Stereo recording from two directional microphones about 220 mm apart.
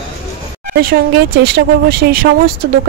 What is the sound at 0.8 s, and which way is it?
Speech, 45° right (ahead or behind).